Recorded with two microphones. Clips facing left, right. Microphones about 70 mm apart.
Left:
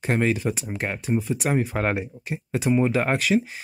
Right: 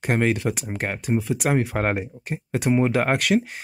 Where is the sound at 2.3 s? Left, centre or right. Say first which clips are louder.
Right 1 dB; right.